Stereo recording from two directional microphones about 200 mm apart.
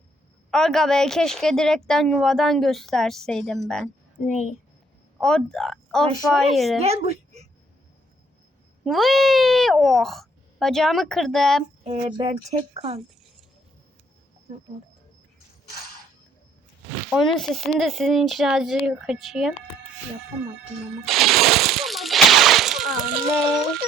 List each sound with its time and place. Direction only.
0.5 s a woman's voice: centre (ahead or behind)
4.2 s a child's voice: 35° left (ahead or behind)
5.2 s a woman's voice: 5° left (ahead or behind)
6.8 s a woman's voice: 30° right (ahead or behind)
8.8 s a woman's voice: centre (ahead or behind)
11.8 s speech: 30° right (ahead or behind)
17.1 s a woman's voice: centre (ahead or behind)
21.0 s a sound: centre (ahead or behind)